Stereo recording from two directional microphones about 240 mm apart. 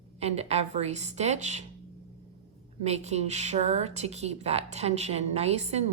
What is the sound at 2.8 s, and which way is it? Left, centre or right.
A woman's voice, right.